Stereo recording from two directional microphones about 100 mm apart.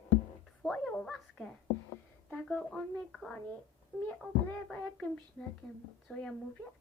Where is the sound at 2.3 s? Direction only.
10° left (ahead or behind).